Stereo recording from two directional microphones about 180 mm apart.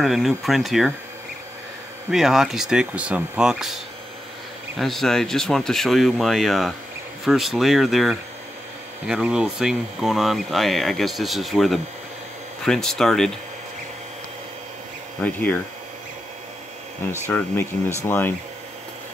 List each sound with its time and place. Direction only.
0.0 s speech: centre (ahead or behind)
2.0 s speech: centre (ahead or behind)
15.2 s speech: 10° left (ahead or behind)
17.3 s speech: 10° left (ahead or behind)